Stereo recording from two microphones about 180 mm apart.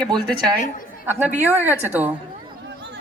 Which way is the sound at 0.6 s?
50° left (ahead or behind).